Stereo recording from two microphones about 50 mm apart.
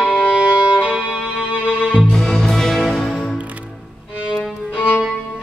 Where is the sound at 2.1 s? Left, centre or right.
Centre.